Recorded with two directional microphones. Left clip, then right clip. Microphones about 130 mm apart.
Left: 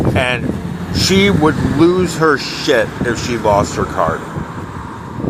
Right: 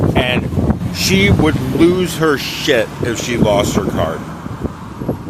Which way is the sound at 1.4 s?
20° right (ahead or behind).